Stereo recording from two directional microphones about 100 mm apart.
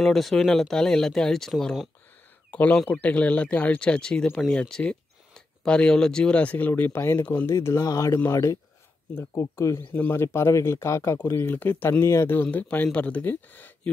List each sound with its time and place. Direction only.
0.0 s speech: centre (ahead or behind)
2.5 s speech: 15° left (ahead or behind)
7.4 s speech: 30° left (ahead or behind)